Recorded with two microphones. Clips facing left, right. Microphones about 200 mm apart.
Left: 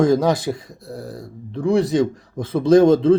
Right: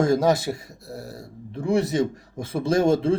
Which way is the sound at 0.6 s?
25° right (ahead or behind).